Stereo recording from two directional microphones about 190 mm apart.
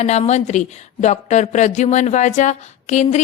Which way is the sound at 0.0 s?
35° left (ahead or behind).